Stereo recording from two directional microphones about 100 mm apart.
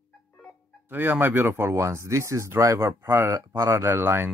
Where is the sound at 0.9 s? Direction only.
20° right (ahead or behind).